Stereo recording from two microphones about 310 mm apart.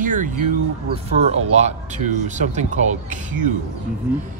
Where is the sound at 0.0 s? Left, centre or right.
Right.